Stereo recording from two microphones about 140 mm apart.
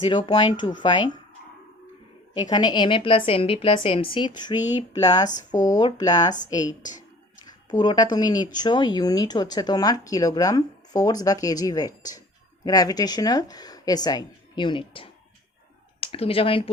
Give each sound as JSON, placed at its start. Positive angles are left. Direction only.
{"t": 0.0, "sound": "a woman's voice", "side_deg": 35}
{"t": 2.4, "sound": "a woman's voice", "side_deg": 30}